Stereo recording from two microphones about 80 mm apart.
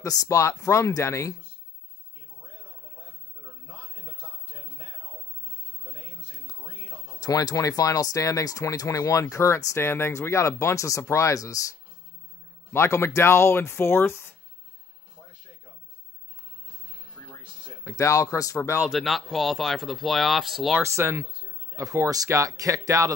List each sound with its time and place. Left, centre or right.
0.0 s speech: left
7.2 s speech: left
12.7 s speech: left
17.8 s speech: left
18.8 s speech: centre
20.8 s speech: right